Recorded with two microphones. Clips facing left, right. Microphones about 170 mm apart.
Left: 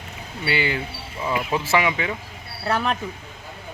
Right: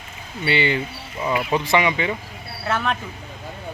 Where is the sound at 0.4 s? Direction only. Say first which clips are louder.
Right 3 dB; 5° left (ahead or behind).